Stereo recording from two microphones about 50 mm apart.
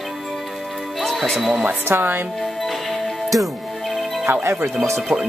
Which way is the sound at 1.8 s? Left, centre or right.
Right.